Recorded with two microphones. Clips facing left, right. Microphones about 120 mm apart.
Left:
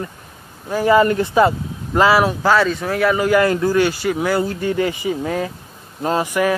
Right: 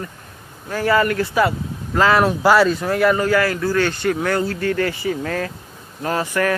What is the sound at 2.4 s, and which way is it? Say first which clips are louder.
Speech: right 2 dB; 5° right (ahead or behind).